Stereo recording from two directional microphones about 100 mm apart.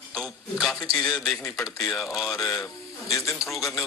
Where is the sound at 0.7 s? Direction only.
35° left (ahead or behind).